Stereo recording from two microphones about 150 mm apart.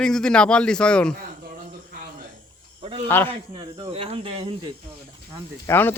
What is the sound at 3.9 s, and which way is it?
Speech, 40° right (ahead or behind).